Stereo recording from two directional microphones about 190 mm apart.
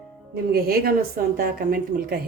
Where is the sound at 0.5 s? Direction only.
55° right (ahead or behind).